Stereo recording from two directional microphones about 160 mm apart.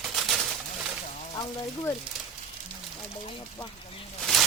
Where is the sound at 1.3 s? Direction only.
25° left (ahead or behind).